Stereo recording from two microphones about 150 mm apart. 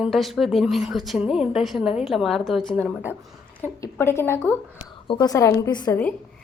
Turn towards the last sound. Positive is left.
turn(degrees=30)  # may be behind; listen again after turning